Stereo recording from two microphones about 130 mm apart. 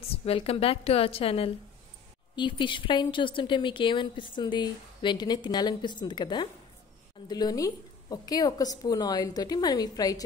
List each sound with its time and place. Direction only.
0.1 s a woman's voice: 45° left (ahead or behind); by 10.2 s 30° left (ahead or behind)